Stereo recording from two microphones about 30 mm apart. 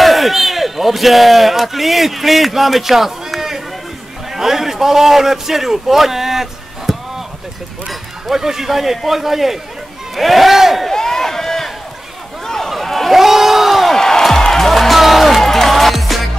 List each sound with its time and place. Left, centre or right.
0.0 s a man's voice: centre
8.4 s a man's voice: centre
10.9 s a sound: centre
13.2 s crowd: centre
13.9 s music: centre
15.4 s music: centre